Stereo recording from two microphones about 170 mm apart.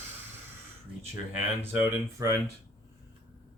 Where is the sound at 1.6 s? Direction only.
15° right (ahead or behind).